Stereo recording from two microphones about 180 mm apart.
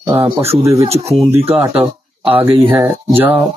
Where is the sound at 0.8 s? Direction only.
35° right (ahead or behind).